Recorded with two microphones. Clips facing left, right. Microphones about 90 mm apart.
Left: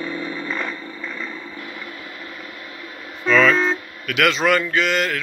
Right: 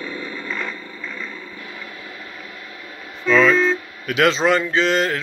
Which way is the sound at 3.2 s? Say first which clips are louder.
Right 1 dB; 10° right (ahead or behind).